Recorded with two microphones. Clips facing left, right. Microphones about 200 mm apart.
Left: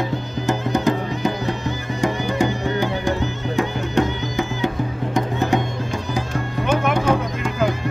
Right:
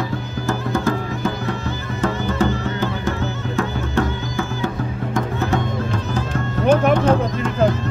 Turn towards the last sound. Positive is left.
turn(degrees=10)  # may be behind; listen again after turning